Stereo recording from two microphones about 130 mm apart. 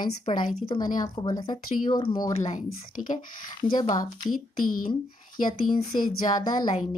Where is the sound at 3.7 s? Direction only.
30° left (ahead or behind).